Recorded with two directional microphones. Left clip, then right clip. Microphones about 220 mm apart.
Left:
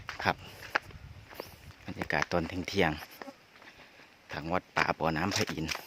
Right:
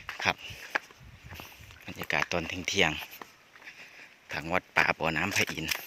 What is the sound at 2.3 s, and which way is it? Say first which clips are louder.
Speech: right 1 dB; 20° left (ahead or behind).